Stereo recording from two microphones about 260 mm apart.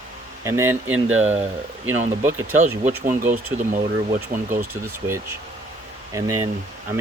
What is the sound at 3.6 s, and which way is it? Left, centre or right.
Speech, right.